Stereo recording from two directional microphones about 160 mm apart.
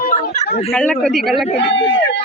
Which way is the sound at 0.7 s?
10° left (ahead or behind).